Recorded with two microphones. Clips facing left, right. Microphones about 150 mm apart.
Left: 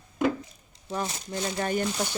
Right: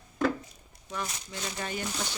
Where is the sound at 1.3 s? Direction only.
50° left (ahead or behind).